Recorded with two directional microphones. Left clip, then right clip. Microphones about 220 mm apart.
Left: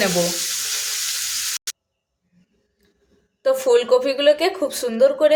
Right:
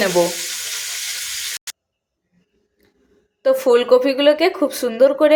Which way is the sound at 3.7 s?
10° right (ahead or behind).